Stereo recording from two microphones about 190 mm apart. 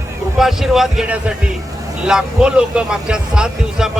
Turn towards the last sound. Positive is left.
turn(degrees=-5)  # may be behind; listen again after turning